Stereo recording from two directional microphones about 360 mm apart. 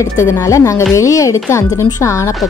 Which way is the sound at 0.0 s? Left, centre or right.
Centre.